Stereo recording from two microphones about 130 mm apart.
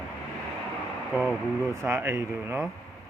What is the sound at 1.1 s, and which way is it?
Speech, 5° left (ahead or behind).